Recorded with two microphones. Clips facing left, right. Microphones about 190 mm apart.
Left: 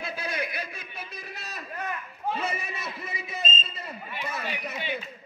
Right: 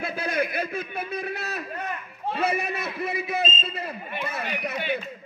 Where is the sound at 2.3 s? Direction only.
65° right (ahead or behind).